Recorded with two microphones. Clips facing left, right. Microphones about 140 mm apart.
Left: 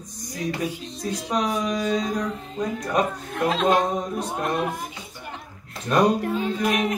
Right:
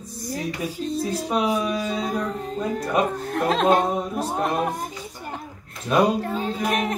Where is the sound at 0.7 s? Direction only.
40° right (ahead or behind).